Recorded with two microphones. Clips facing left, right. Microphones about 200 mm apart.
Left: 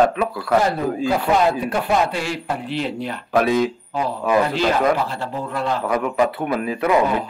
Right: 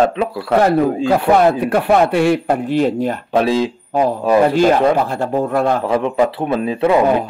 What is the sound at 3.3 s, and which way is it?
Speech, 25° right (ahead or behind).